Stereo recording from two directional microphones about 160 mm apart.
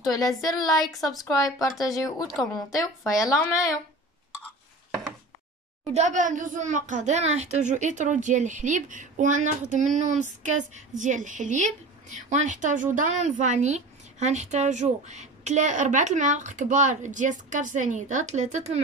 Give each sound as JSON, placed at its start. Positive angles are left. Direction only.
{"t": 0.0, "sound": "speech", "side_deg": 20}
{"t": 0.9, "sound": "speech", "side_deg": 0}
{"t": 1.3, "sound": "speech", "side_deg": 20}
{"t": 2.2, "sound": "speech", "side_deg": 0}
{"t": 3.1, "sound": "speech", "side_deg": 20}
{"t": 5.9, "sound": "a woman's voice", "side_deg": -50}